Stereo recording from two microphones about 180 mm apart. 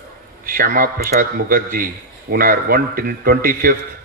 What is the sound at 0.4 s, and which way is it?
A man's voice, 50° right (ahead or behind).